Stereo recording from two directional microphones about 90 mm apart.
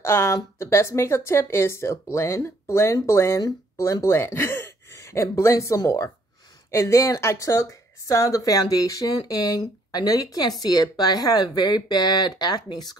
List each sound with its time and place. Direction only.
0.0 s a woman's voice: 30° left (ahead or behind); by 12.9 s 50° left (ahead or behind)